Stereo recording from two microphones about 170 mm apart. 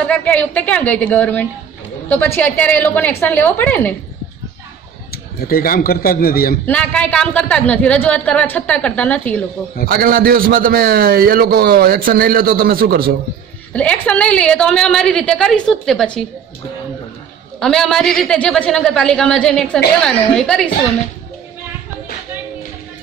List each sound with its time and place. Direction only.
0.1 s speech: 10° left (ahead or behind)
5.1 s a man's voice: 60° left (ahead or behind)
6.6 s speech: 10° left (ahead or behind)
9.8 s a man's voice: 60° right (ahead or behind)
13.7 s a woman's voice: 10° left (ahead or behind)
17.6 s a woman's voice: 5° left (ahead or behind)